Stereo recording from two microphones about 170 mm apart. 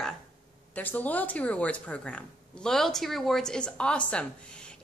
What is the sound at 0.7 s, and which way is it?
Speech, 10° left (ahead or behind).